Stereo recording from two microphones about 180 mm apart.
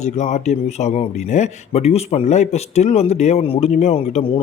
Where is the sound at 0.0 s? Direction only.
40° left (ahead or behind).